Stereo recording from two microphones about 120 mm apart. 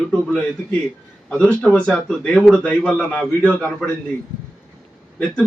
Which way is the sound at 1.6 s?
5° left (ahead or behind).